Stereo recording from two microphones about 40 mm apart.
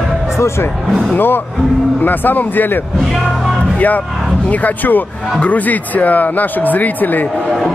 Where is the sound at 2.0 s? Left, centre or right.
Left.